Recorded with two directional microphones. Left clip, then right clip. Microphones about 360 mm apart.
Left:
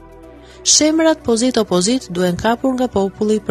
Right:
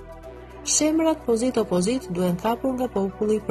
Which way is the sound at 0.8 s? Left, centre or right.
Left.